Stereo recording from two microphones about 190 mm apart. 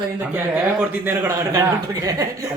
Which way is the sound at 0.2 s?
10° right (ahead or behind).